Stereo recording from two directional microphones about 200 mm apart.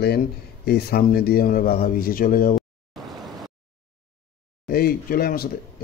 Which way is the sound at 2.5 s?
Centre (ahead or behind).